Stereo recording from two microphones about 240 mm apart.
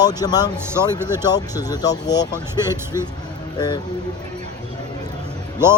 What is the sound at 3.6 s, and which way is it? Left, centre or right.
Speech, centre.